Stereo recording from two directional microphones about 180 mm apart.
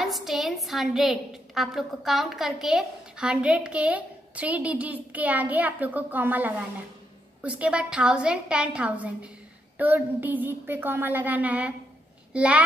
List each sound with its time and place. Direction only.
0.0 s a woman's voice: centre (ahead or behind)